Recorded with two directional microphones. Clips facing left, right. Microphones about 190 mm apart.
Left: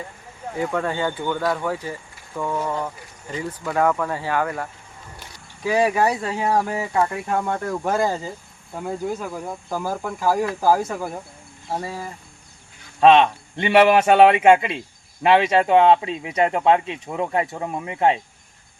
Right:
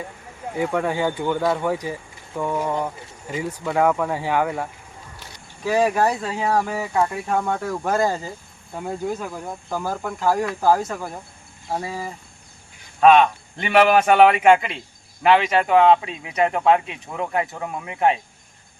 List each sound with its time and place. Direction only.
0.5 s speech: 10° right (ahead or behind)
5.6 s speech: 10° left (ahead or behind)
13.0 s speech: 25° left (ahead or behind)